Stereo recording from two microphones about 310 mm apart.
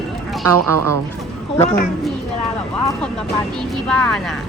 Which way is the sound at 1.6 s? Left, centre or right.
Left.